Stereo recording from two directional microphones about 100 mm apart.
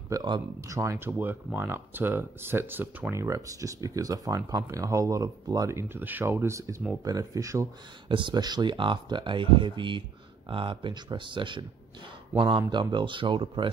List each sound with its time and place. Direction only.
0.1 s speech: 40° right (ahead or behind)
0.7 s speech: 30° right (ahead or behind)
8.1 s speech: 50° right (ahead or behind)